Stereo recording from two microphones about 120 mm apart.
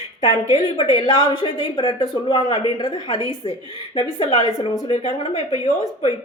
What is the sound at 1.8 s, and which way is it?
A woman's voice, 40° left (ahead or behind).